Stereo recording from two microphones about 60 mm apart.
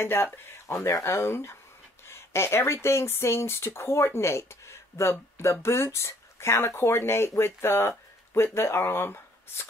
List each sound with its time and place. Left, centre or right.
0.0 s speech: left